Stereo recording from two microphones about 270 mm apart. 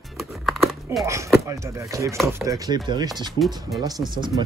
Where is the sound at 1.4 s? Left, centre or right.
Centre.